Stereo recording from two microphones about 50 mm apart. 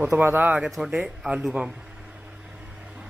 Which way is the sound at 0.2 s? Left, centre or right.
Right.